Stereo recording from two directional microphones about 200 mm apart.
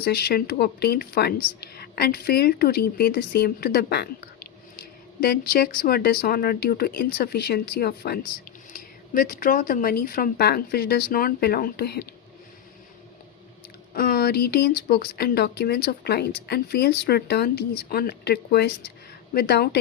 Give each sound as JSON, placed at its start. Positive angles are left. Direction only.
{"t": 0.0, "sound": "speech", "side_deg": 55}
{"t": 5.2, "sound": "speech", "side_deg": 50}
{"t": 13.9, "sound": "speech", "side_deg": 50}